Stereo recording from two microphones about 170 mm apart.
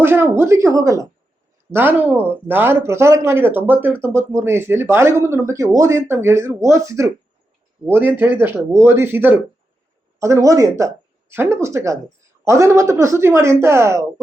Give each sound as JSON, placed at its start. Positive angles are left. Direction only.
{"t": 0.0, "sound": "speech", "side_deg": -15}